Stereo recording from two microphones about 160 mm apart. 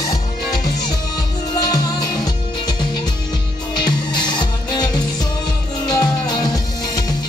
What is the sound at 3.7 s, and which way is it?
Music, 25° left (ahead or behind).